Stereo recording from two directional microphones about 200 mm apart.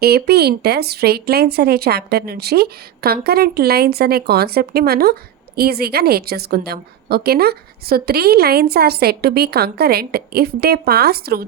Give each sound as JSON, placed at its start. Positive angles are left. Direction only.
{"t": 0.0, "sound": "a woman's voice", "side_deg": -50}